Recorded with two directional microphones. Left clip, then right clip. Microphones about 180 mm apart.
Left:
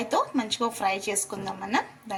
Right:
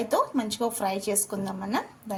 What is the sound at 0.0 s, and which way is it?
A woman's voice, 35° right (ahead or behind).